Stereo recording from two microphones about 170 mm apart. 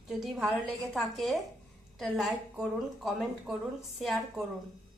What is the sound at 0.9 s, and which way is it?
A woman's voice, centre (ahead or behind).